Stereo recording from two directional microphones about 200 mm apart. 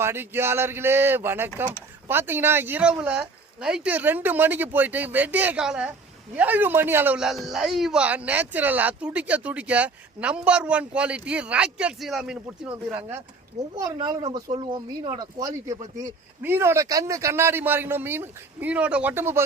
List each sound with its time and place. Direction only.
0.0 s a man's voice: 10° right (ahead or behind)
13.7 s a man's voice: 20° right (ahead or behind)